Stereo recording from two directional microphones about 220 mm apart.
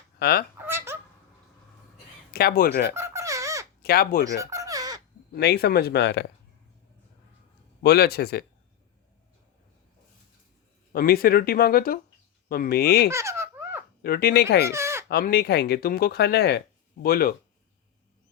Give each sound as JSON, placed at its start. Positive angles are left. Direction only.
{"t": 0.2, "sound": "speech", "side_deg": 45}
{"t": 0.6, "sound": "fowl", "side_deg": -10}
{"t": 2.3, "sound": "speech", "side_deg": 45}
{"t": 2.9, "sound": "a sound", "side_deg": -10}
{"t": 3.8, "sound": "speech", "side_deg": 45}
{"t": 4.4, "sound": "a sound", "side_deg": -15}
{"t": 5.3, "sound": "speech", "side_deg": 45}
{"t": 7.8, "sound": "speech", "side_deg": 45}
{"t": 10.9, "sound": "speech", "side_deg": 45}
{"t": 13.1, "sound": "baby laughter", "side_deg": -15}
{"t": 14.0, "sound": "speech", "side_deg": 45}
{"t": 14.7, "sound": "bleat", "side_deg": -10}
{"t": 15.1, "sound": "speech", "side_deg": 45}